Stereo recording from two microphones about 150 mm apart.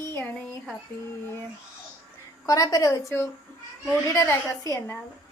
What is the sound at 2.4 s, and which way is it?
Speech, 25° left (ahead or behind).